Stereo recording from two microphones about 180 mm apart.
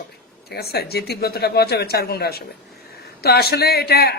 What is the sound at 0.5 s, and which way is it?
A man's voice, 60° left (ahead or behind).